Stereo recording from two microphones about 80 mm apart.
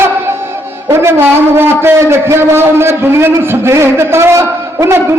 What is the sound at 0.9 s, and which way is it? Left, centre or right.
A man's voice, right.